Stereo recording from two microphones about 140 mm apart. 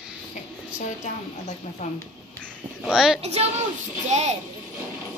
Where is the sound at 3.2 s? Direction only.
50° right (ahead or behind).